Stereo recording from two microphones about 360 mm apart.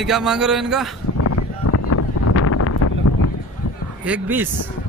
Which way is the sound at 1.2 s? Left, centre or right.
Left.